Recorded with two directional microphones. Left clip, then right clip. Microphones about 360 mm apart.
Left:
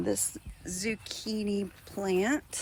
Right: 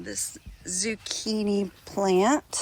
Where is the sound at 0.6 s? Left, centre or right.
Centre.